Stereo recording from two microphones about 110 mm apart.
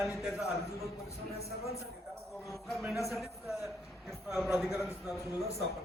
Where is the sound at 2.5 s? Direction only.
Centre (ahead or behind).